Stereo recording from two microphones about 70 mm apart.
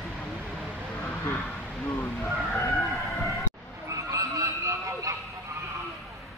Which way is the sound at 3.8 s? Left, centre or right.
Right.